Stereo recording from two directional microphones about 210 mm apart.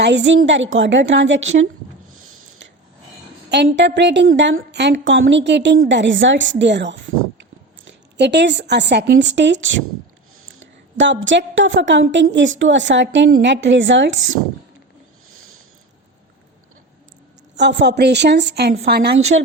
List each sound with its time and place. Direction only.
0.0 s a woman's voice: 55° right (ahead or behind)
2.1 s a sound: 85° right
3.5 s a woman's voice: 55° right (ahead or behind)
10.9 s a woman's voice: 60° right (ahead or behind)
17.6 s a woman's voice: 55° right (ahead or behind)